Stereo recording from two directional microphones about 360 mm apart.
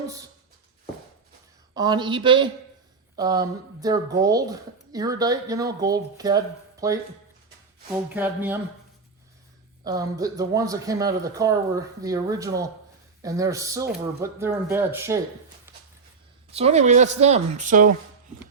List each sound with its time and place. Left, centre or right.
1.7 s speech: centre
8.1 s speech: centre
9.8 s speech: centre
16.5 s speech: centre